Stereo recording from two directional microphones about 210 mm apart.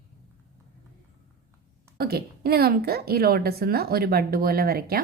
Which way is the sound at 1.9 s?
45° right (ahead or behind).